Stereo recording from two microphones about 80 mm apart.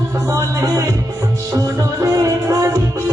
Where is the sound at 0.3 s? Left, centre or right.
Right.